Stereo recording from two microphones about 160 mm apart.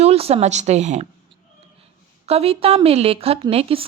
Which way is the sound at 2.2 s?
40° right (ahead or behind).